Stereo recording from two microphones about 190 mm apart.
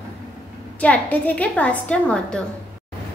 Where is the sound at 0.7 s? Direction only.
5° left (ahead or behind).